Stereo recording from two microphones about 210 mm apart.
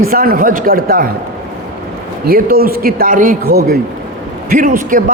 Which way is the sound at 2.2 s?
45° right (ahead or behind).